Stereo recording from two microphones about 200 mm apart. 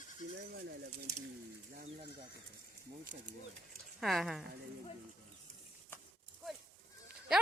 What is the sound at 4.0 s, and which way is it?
Speech, centre (ahead or behind).